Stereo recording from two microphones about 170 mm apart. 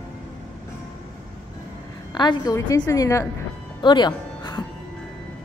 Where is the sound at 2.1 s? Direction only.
25° left (ahead or behind).